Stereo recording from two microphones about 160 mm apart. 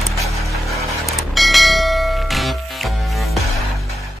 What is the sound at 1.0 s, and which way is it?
Church bell, centre (ahead or behind).